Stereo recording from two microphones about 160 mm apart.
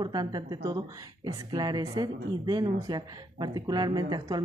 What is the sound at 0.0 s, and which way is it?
Speech, 25° right (ahead or behind).